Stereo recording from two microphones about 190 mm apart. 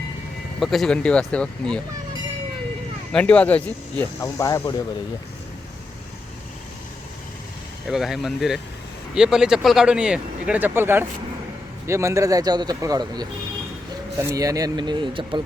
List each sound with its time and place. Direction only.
0.6 s speech: centre (ahead or behind)
3.1 s speech: 5° left (ahead or behind)
7.9 s speech: centre (ahead or behind); by 15.4 s 25° right (ahead or behind)